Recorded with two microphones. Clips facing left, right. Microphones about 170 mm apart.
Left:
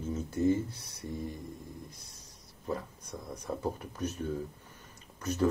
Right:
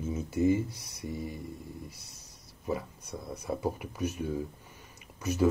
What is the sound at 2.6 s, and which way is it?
Speech, 10° right (ahead or behind).